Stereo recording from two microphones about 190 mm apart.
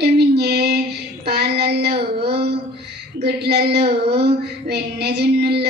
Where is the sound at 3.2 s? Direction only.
60° right (ahead or behind).